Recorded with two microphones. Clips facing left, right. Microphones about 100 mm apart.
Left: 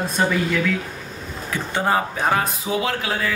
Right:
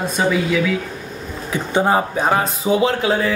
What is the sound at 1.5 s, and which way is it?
Speech, 15° right (ahead or behind).